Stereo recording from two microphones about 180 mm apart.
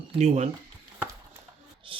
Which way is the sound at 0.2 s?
40° right (ahead or behind).